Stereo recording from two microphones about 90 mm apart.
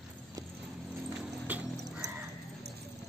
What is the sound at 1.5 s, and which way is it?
Music, 15° right (ahead or behind).